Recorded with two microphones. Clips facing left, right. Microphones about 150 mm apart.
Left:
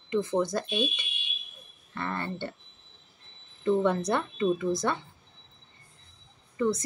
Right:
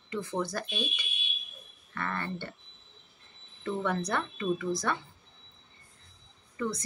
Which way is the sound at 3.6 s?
25° left (ahead or behind).